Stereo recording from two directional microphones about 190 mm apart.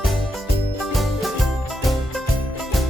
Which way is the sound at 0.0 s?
Centre (ahead or behind).